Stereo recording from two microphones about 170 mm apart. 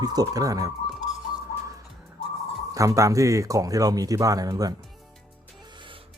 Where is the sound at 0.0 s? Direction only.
20° right (ahead or behind).